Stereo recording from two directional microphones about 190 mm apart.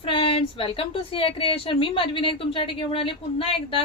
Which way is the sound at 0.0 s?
30° left (ahead or behind).